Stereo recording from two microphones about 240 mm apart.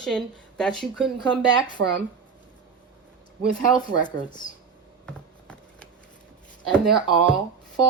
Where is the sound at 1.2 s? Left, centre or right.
Centre.